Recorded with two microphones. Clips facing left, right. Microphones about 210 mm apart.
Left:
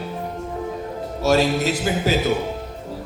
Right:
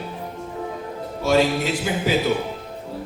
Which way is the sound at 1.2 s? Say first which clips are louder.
Left 1 dB; 45° left (ahead or behind).